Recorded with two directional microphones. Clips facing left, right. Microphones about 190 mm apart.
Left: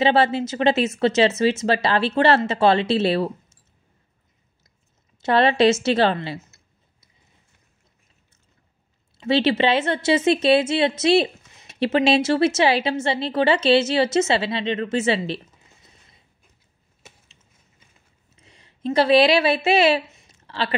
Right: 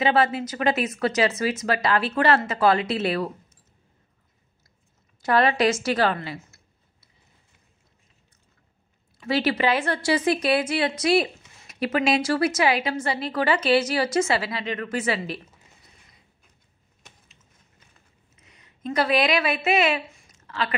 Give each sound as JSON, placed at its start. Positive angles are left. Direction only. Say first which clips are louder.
{"t": 0.0, "sound": "a woman's voice", "louder": "left 3 dB", "side_deg": 30}
{"t": 5.2, "sound": "speech", "louder": "left 4 dB", "side_deg": 25}
{"t": 9.2, "sound": "a woman's voice", "louder": "left 4 dB", "side_deg": 25}
{"t": 18.3, "sound": "a sound", "louder": "left 3 dB", "side_deg": 30}